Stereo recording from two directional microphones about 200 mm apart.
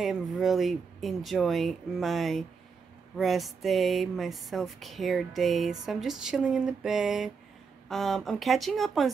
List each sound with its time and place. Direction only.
0.0 s speech: centre (ahead or behind)